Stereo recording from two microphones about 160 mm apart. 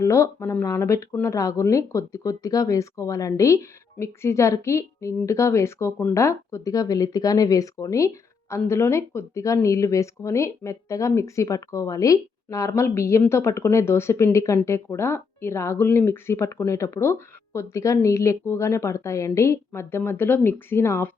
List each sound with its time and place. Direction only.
0.0 s speech: 20° left (ahead or behind)